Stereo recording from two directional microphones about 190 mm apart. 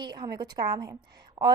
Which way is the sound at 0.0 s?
25° right (ahead or behind).